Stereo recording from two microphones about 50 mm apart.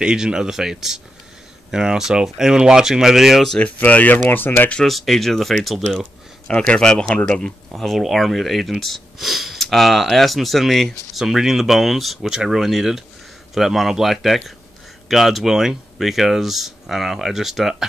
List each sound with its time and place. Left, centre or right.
0.0 s speech: centre
3.5 s speech: left
4.8 s speech: centre
5.9 s speech: centre
7.7 s speech: centre